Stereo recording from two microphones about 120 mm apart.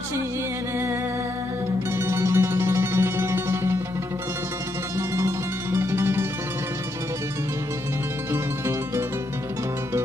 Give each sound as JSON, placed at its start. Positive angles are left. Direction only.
{"t": 1.9, "sound": "music", "side_deg": -20}
{"t": 4.9, "sound": "music", "side_deg": -25}
{"t": 8.3, "sound": "music", "side_deg": -20}